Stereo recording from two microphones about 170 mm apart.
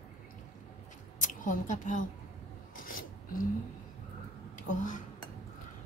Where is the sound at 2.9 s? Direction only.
55° left (ahead or behind).